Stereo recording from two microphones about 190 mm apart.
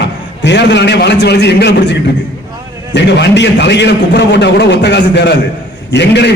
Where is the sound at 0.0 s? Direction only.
70° left (ahead or behind).